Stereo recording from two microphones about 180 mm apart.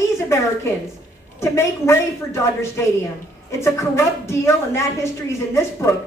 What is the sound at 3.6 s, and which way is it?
A woman's voice, 15° left (ahead or behind).